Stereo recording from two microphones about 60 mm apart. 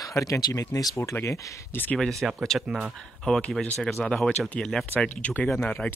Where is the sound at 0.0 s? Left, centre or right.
Left.